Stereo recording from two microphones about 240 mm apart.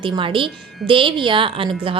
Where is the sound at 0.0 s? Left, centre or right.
Right.